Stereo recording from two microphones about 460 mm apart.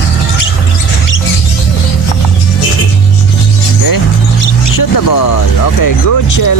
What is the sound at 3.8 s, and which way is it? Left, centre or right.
Speech, left.